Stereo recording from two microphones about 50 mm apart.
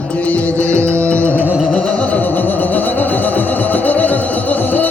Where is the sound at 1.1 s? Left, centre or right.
Left.